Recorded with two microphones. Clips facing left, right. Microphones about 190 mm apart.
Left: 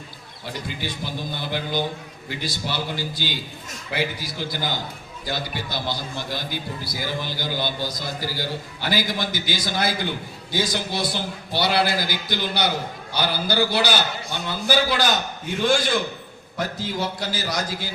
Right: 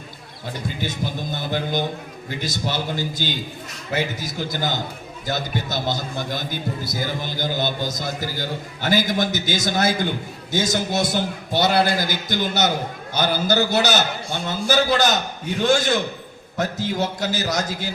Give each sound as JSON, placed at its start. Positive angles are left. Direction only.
{"t": 0.8, "sound": "a man's voice", "side_deg": -45}